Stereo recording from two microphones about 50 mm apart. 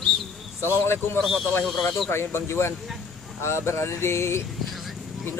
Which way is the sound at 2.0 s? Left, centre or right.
Left.